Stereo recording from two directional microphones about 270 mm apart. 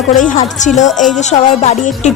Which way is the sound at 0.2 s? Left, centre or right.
Left.